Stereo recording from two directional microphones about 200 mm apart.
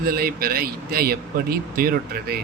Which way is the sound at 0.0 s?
50° right (ahead or behind).